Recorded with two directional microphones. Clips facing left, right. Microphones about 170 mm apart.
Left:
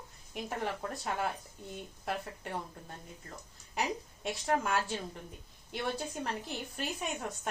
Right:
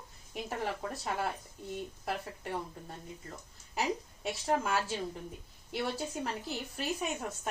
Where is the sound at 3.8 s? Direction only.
Centre (ahead or behind).